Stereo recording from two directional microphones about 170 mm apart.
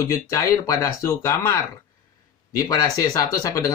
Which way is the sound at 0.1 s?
20° left (ahead or behind).